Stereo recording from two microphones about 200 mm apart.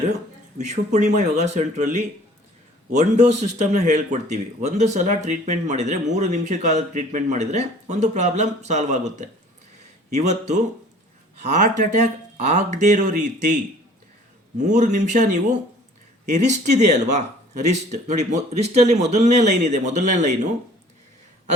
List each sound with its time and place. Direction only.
0.6 s speech: 35° right (ahead or behind)
14.6 s speech: 40° right (ahead or behind)